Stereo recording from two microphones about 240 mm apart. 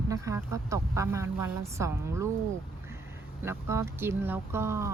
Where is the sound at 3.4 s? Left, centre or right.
Centre.